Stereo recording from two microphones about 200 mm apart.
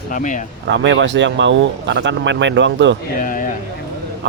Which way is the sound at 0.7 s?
60° right (ahead or behind).